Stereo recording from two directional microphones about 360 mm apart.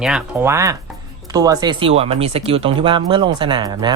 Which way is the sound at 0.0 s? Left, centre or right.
Centre.